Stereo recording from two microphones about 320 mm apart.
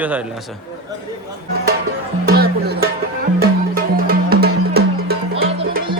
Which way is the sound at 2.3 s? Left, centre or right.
Right.